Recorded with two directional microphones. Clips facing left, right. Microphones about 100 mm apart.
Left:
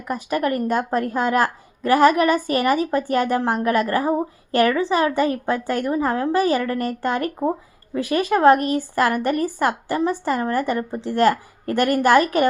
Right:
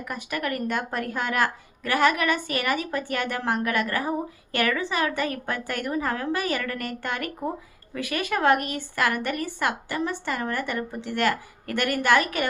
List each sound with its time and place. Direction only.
0.0 s speech: 35° left (ahead or behind)